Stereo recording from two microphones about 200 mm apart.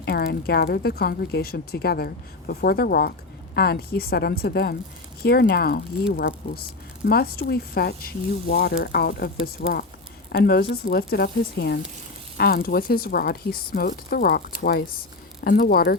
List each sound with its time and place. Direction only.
0.0 s a woman's voice: 55° left (ahead or behind)